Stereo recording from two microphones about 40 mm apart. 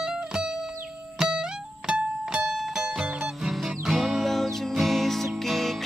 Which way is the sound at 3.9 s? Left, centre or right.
Centre.